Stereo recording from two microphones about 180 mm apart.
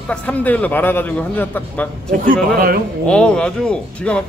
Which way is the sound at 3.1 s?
5° left (ahead or behind).